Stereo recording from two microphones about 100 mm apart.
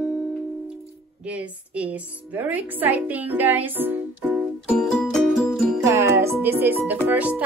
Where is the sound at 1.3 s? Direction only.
15° right (ahead or behind).